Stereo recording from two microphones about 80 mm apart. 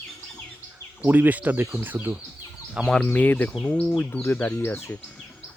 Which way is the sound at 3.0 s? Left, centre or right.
Left.